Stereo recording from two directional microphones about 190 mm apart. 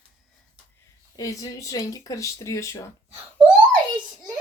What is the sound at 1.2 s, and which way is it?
Speech, 15° left (ahead or behind).